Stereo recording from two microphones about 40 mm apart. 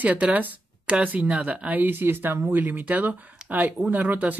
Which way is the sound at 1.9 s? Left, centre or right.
Right.